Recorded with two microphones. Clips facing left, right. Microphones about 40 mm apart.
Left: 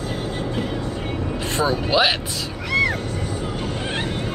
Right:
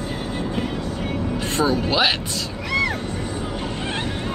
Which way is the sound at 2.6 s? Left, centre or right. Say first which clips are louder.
Left 2 dB; centre.